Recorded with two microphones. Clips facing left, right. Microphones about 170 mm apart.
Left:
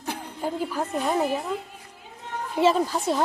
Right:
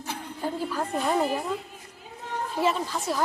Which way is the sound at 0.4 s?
10° left (ahead or behind).